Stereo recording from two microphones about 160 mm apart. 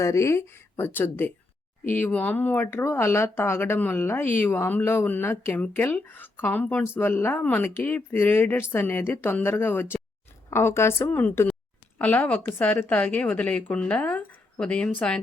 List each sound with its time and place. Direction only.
0.0 s speech: 20° left (ahead or behind)